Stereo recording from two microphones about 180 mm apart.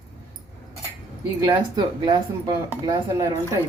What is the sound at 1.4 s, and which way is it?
Speech, 25° right (ahead or behind).